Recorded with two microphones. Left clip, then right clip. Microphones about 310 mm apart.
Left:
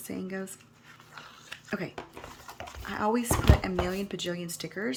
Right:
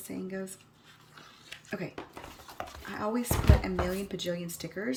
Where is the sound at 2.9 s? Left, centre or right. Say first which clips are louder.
Left 5 dB; centre.